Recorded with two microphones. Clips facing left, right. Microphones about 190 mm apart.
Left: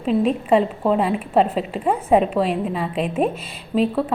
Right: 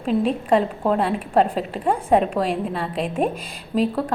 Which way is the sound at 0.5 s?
5° left (ahead or behind).